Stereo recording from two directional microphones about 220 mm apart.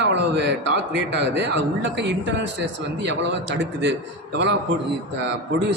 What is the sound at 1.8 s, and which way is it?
Speech, 55° right (ahead or behind).